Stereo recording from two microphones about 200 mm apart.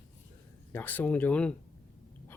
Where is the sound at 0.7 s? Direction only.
10° left (ahead or behind).